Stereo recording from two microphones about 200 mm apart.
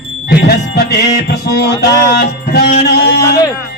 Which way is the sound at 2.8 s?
55° left (ahead or behind).